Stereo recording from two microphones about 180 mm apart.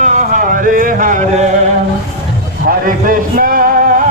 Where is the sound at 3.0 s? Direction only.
55° right (ahead or behind).